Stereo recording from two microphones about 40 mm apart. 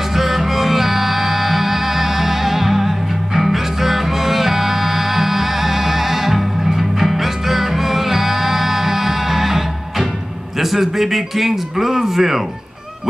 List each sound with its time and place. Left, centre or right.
0.1 s music: centre
10.6 s speech: centre